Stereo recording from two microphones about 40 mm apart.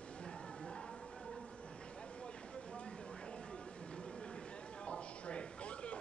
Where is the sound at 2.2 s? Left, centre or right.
Left.